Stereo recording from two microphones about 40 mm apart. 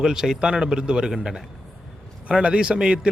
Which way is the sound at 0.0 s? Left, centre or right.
Centre.